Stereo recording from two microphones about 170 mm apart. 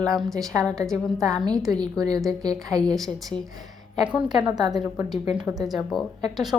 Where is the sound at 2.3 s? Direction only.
20° right (ahead or behind).